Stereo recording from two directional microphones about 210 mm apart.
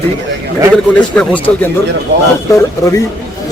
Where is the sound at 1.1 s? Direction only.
5° left (ahead or behind).